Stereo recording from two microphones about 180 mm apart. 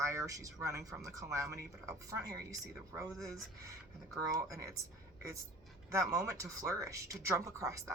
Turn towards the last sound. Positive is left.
turn(degrees=-15)  # may be behind; listen again after turning